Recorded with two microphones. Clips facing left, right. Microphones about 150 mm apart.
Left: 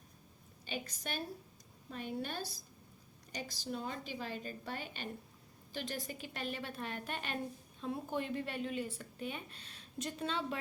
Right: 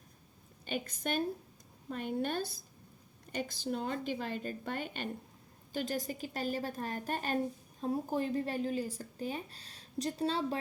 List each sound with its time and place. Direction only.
0.6 s a woman's voice: 50° right (ahead or behind); by 10.6 s 35° right (ahead or behind)